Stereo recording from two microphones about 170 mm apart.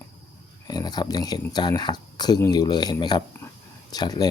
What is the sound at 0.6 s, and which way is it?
Speech, 25° left (ahead or behind).